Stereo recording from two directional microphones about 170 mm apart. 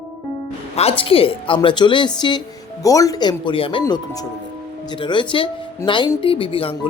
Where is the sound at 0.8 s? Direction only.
35° left (ahead or behind).